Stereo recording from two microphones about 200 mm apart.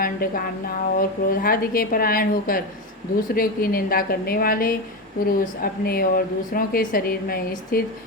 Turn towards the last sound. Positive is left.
turn(degrees=50)  # may be behind; listen again after turning